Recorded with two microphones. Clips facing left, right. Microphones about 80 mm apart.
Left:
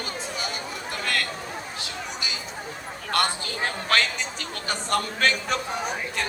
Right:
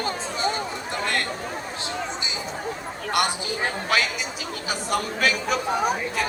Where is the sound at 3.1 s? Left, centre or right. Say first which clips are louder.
Right 1 dB; centre.